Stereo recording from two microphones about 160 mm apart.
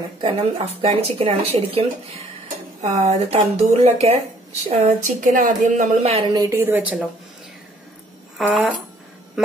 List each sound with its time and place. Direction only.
0.2 s speech: 35° right (ahead or behind)
5.0 s a woman's voice: 55° right (ahead or behind)
6.0 s speech: 40° right (ahead or behind)
6.3 s a woman's voice: 20° right (ahead or behind)
8.4 s speech: 5° right (ahead or behind)